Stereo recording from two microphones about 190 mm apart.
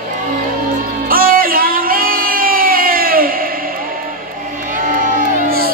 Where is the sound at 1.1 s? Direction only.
50° right (ahead or behind).